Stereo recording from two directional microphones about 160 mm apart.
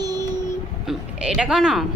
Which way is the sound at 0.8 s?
5° right (ahead or behind).